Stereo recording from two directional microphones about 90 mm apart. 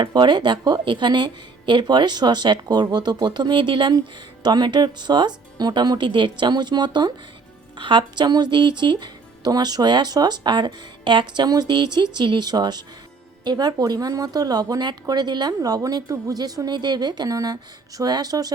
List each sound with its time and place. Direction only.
0.0 s speech: 55° right (ahead or behind)
4.4 s speech: 55° right (ahead or behind)